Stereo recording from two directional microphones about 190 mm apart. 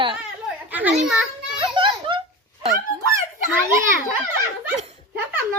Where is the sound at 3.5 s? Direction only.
10° right (ahead or behind).